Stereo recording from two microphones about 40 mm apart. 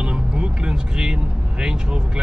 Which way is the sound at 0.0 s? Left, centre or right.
Right.